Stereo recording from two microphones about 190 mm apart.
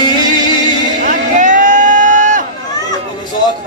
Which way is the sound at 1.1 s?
45° right (ahead or behind).